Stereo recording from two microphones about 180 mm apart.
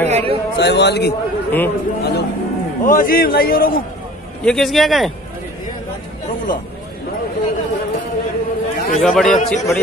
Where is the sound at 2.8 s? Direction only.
50° left (ahead or behind).